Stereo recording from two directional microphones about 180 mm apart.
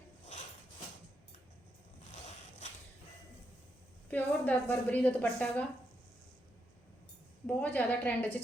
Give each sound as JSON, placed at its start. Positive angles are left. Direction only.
{"t": 4.1, "sound": "a woman's voice", "side_deg": 10}
{"t": 7.4, "sound": "a woman's voice", "side_deg": 10}